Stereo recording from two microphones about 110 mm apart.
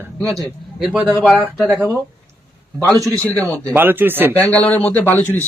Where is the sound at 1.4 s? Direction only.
20° right (ahead or behind).